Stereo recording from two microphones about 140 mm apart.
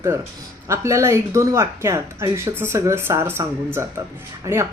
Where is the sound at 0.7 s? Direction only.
20° right (ahead or behind).